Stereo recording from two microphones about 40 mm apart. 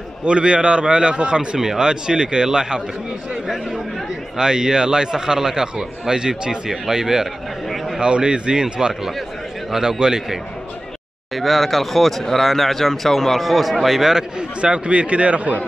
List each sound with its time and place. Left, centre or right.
0.2 s a man's voice: right
4.4 s a man's voice: centre
7.6 s a sound: centre
8.0 s a man's voice: right
11.3 s speech: centre
14.6 s speech: right